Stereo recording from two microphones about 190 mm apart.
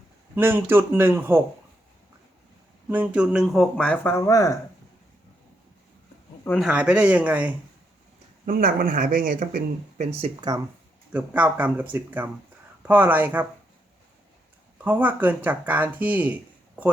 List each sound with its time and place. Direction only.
0.3 s speech: 10° right (ahead or behind)
2.9 s speech: 5° right (ahead or behind); by 4.5 s 15° left (ahead or behind)
6.6 s speech: 5° right (ahead or behind)
8.4 s speech: 50° right (ahead or behind)
10.1 s speech: 30° right (ahead or behind)
11.1 s speech: 10° right (ahead or behind)
14.8 s speech: 10° right (ahead or behind)